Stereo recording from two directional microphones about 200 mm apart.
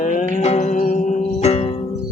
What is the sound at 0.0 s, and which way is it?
Music, 40° left (ahead or behind).